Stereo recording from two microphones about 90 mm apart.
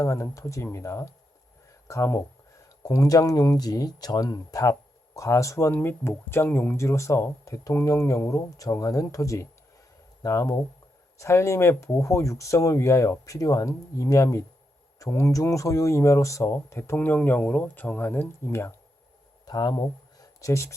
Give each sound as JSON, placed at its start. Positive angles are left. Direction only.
{"t": 0.0, "sound": "speech", "side_deg": 35}
{"t": 19.5, "sound": "speech", "side_deg": 50}